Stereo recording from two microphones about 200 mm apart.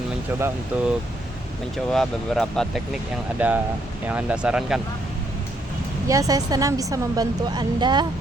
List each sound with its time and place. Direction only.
0.3 s a woman's voice: 10° right (ahead or behind)
1.9 s a woman's voice: centre (ahead or behind)
6.1 s a woman's voice: 15° right (ahead or behind)